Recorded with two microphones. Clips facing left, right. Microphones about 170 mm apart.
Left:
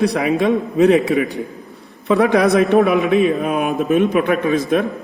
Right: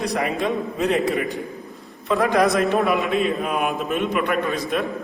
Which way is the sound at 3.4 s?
45° left (ahead or behind).